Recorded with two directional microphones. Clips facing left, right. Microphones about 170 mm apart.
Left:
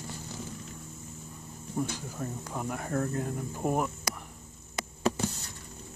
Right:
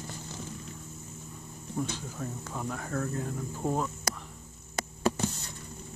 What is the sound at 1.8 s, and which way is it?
Speech, 10° left (ahead or behind).